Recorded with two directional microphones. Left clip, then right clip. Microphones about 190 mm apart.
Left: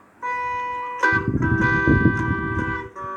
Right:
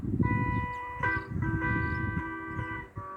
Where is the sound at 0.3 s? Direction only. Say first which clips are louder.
Left 11 dB; 50° left (ahead or behind).